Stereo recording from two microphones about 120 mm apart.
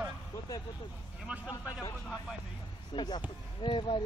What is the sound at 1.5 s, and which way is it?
Speech, 35° left (ahead or behind).